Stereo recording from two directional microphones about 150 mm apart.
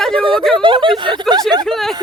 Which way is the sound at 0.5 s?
35° right (ahead or behind).